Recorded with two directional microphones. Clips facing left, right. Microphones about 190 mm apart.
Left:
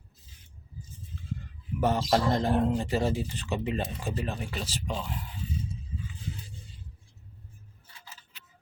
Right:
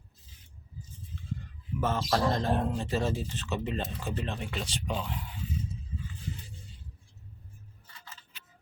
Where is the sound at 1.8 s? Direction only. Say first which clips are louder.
Left 3 dB; 20° left (ahead or behind); by 5.1 s centre (ahead or behind).